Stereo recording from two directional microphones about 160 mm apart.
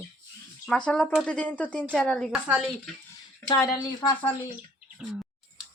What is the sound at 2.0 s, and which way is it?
Stir, 5° left (ahead or behind).